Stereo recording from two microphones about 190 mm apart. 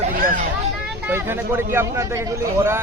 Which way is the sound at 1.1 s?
10° right (ahead or behind).